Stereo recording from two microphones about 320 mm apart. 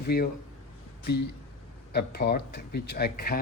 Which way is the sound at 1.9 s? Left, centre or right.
Left.